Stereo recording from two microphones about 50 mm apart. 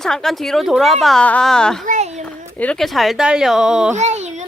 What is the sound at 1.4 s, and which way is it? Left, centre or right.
Speech, centre.